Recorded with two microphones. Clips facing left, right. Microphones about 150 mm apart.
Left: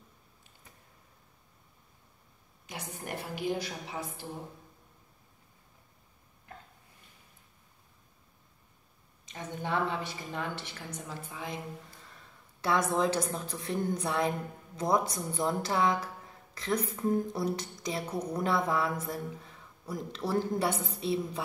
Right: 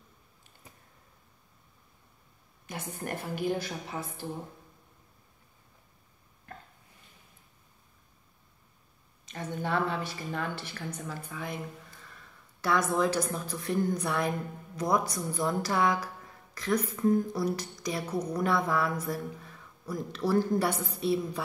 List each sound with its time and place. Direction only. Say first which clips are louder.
2.6 s a woman's voice: right 4 dB; 50° right (ahead or behind)
9.2 s a woman's voice: right 3 dB; 20° left (ahead or behind)
12.6 s a woman's voice: right 1 dB; 25° left (ahead or behind)